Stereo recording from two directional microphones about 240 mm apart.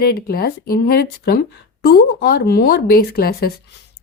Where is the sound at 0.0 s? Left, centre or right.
Left.